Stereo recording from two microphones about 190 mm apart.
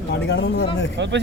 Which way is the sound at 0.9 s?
70° right (ahead or behind).